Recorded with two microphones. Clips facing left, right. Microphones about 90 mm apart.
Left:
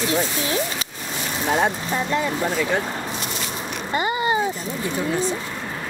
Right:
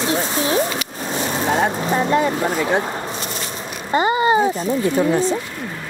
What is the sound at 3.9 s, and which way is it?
Speech, 30° right (ahead or behind).